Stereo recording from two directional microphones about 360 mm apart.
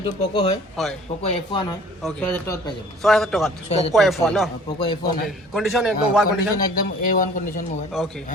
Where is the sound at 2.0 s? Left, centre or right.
Centre.